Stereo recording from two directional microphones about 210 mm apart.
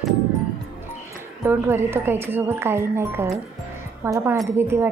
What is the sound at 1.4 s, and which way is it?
A woman's voice, 10° right (ahead or behind).